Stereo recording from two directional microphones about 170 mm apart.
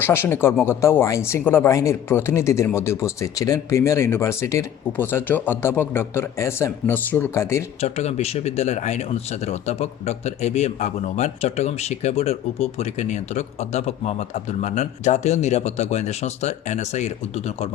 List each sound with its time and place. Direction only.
0.0 s speech: 15° left (ahead or behind)
7.8 s speech: 40° left (ahead or behind)